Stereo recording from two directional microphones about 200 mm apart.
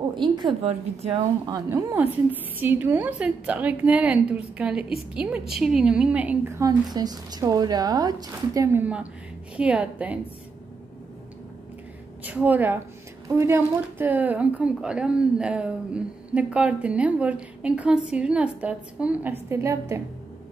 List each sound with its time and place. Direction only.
0.1 s a woman's voice: 25° right (ahead or behind)
1.5 s a woman's voice: 15° right (ahead or behind)
12.2 s a woman's voice: 10° right (ahead or behind)